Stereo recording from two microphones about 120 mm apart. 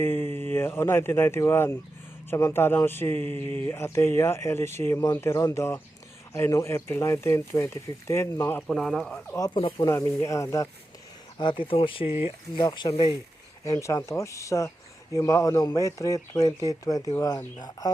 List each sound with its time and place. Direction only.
0.0 s speech: 20° left (ahead or behind)
8.6 s speech: 5° left (ahead or behind)
9.2 s speech: 20° left (ahead or behind)
9.6 s speech: 45° left (ahead or behind)
9.9 s speech: 30° left (ahead or behind)
11.3 s speech: 40° left (ahead or behind)
13.7 s speech: 25° left (ahead or behind)